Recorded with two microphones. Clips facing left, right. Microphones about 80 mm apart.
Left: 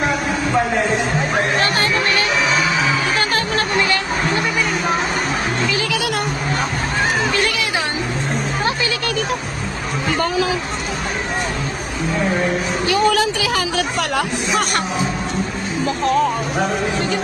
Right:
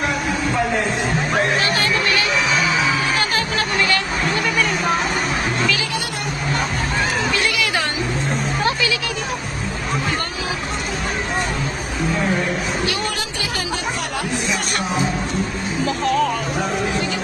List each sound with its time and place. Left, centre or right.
1.6 s a sound: left
3.2 s music: left
3.8 s a sound: left
7.3 s music: left
8.6 s music: left
13.4 s speech: left
14.6 s speech: left
15.9 s speech: left